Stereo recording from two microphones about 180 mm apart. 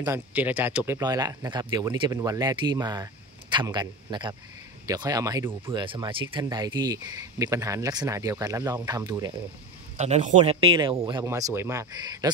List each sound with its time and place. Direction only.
0.0 s speech: 10° right (ahead or behind)
5.7 s speech: 25° right (ahead or behind)
9.9 s speech: 40° right (ahead or behind)
11.2 s speech: 15° right (ahead or behind)